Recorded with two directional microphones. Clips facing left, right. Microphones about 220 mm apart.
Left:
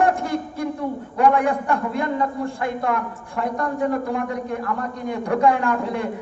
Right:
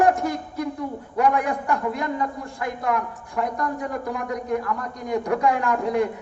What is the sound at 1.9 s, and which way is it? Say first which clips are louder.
A man's voice: left 3 dB; 30° left (ahead or behind).